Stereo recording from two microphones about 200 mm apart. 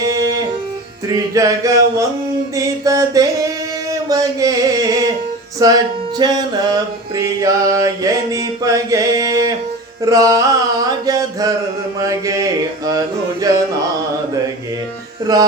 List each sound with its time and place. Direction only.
0.0 s music: 15° right (ahead or behind)
2.6 s mantra: 15° right (ahead or behind)
4.1 s music: 15° right (ahead or behind)
10.0 s mantra: 15° right (ahead or behind)
11.9 s music: 15° right (ahead or behind)
15.3 s music: 20° right (ahead or behind)